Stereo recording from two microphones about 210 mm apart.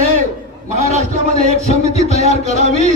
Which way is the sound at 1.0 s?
30° left (ahead or behind).